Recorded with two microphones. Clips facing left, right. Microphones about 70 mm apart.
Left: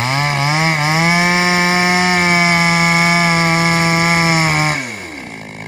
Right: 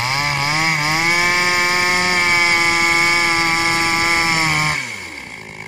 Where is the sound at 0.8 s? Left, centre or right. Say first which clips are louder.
Left 3 dB; centre.